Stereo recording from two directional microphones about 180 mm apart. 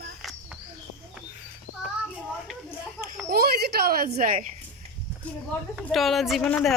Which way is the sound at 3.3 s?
60° right (ahead or behind).